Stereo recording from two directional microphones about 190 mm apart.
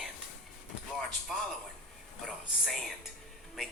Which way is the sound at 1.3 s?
Centre (ahead or behind).